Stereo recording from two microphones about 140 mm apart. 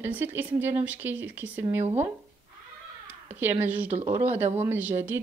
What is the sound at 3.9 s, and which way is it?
Speech, 45° right (ahead or behind).